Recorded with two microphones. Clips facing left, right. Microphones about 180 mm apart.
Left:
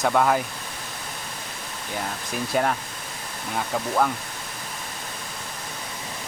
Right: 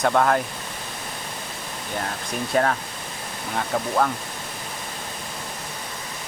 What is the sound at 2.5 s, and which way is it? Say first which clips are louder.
Speech: right 2 dB; 5° left (ahead or behind).